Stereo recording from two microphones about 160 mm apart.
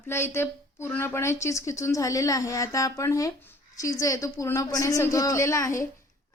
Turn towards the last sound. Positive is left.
turn(degrees=20)  # may be behind; listen again after turning